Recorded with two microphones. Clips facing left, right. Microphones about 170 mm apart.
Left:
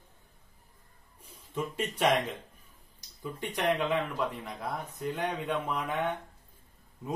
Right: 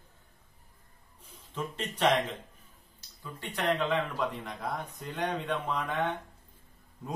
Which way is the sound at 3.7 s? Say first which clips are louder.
Even; centre (ahead or behind).